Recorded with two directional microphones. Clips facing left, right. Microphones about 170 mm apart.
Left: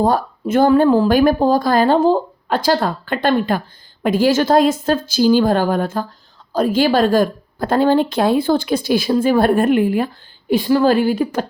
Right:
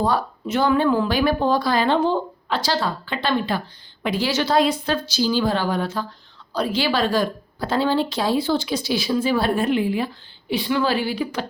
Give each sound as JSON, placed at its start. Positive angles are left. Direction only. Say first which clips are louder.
{"t": 0.0, "sound": "speech", "louder": "left 5 dB", "side_deg": 50}